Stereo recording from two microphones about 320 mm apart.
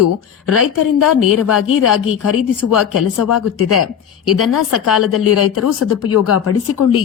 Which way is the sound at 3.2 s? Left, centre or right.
Left.